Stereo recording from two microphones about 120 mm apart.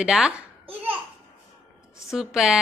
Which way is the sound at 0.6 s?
50° right (ahead or behind).